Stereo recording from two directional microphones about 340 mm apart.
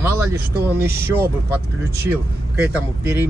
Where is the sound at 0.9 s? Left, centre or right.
Right.